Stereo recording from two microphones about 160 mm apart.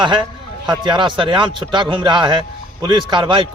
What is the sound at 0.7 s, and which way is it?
A man's voice, 30° right (ahead or behind).